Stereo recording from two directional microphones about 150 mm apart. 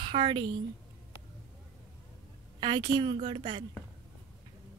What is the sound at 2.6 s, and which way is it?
A woman's voice, 30° right (ahead or behind).